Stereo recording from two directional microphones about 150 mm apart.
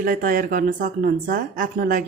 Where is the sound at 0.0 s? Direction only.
65° right (ahead or behind).